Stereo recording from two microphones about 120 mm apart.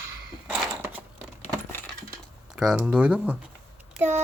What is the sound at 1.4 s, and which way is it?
Coin, 15° left (ahead or behind).